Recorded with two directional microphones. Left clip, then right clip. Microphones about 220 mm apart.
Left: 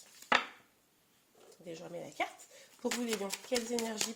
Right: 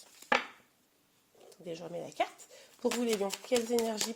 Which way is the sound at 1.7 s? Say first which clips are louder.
Right 4 dB; 40° right (ahead or behind).